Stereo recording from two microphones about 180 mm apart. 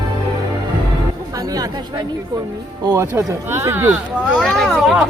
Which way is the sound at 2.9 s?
15° right (ahead or behind).